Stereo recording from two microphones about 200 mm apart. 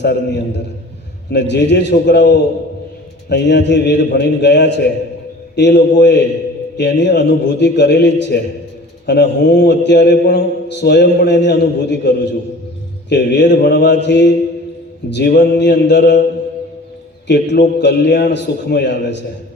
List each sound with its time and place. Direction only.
0.0 s a man's voice: 60° left (ahead or behind)
17.2 s a man's voice: 60° left (ahead or behind)